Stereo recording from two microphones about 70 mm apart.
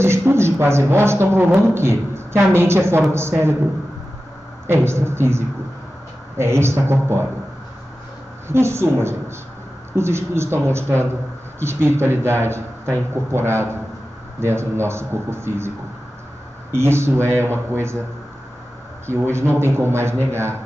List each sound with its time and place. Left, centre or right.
0.0 s speech: right
4.6 s speech: right
8.5 s speech: right
16.7 s speech: right
19.3 s speech: right